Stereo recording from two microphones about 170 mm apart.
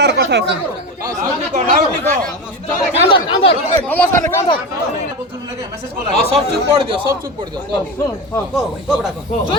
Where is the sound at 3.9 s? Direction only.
10° left (ahead or behind).